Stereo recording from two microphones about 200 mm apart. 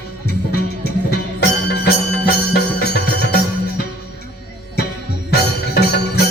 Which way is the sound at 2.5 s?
55° left (ahead or behind).